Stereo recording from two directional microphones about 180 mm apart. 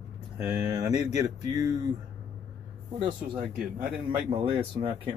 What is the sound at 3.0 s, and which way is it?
Speech, 30° right (ahead or behind).